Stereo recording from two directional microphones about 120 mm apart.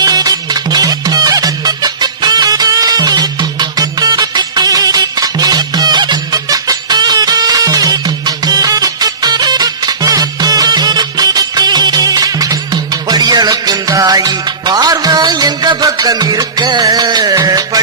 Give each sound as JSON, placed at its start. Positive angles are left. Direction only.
{"t": 0.0, "sound": "music", "side_deg": -30}